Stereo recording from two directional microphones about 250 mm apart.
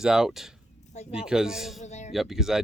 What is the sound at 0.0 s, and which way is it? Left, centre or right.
Speech, centre.